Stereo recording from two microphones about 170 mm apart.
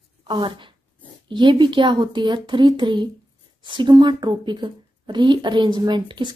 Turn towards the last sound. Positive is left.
turn(degrees=-25)  # may be behind; listen again after turning